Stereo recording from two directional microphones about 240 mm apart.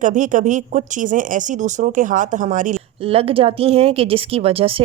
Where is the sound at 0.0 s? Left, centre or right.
Right.